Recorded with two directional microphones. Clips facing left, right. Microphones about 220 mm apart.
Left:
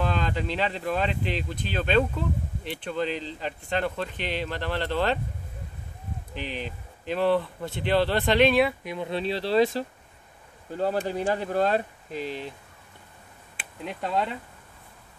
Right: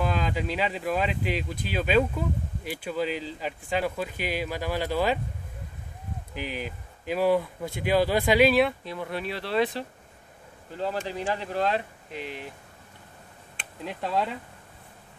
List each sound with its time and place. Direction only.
0.0 s speech: 5° right (ahead or behind)
6.3 s speech: 5° right (ahead or behind)
8.8 s speech: 20° left (ahead or behind)
10.8 s speech: 45° left (ahead or behind); by 12.5 s 30° left (ahead or behind)
13.6 s speech: centre (ahead or behind)